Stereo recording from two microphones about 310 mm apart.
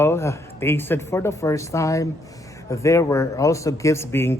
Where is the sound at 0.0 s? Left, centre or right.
Centre.